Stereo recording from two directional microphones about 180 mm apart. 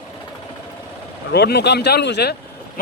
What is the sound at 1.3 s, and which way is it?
Speech, 70° left (ahead or behind).